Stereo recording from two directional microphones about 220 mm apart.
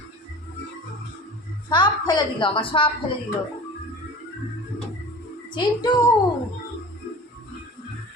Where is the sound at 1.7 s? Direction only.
20° left (ahead or behind).